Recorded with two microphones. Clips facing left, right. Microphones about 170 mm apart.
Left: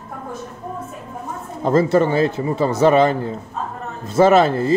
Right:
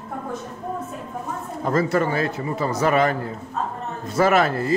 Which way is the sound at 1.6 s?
25° left (ahead or behind).